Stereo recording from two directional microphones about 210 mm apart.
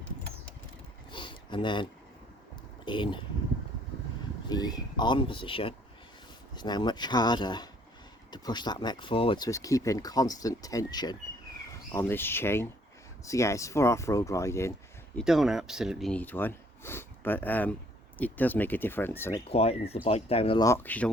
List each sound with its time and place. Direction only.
1.1 s a sound: 20° left (ahead or behind)
2.8 s speech: 25° left (ahead or behind)
4.4 s speech: 20° left (ahead or behind)
15.2 s speech: centre (ahead or behind)
19.5 s speech: 30° left (ahead or behind)
20.7 s speech: 10° left (ahead or behind)